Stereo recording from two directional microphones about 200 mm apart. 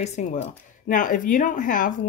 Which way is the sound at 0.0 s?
35° left (ahead or behind).